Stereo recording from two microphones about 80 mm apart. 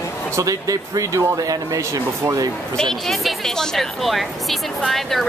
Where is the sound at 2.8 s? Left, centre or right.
Centre.